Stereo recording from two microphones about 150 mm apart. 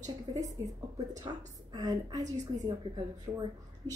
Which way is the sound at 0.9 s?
20° right (ahead or behind).